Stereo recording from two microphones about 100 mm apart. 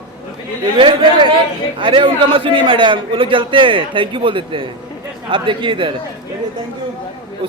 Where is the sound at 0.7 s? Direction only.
60° right (ahead or behind).